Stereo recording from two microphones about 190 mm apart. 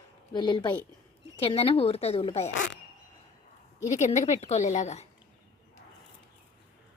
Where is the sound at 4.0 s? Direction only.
35° left (ahead or behind).